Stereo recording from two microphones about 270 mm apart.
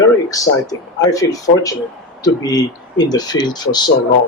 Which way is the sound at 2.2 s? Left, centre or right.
Centre.